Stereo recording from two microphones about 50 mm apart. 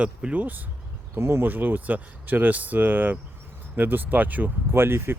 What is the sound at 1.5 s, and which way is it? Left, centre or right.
Speech, right.